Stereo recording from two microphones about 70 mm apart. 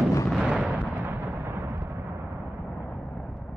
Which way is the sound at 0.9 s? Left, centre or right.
Right.